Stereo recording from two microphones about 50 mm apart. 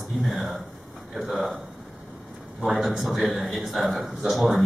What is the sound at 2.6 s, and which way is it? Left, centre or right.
Speech, centre.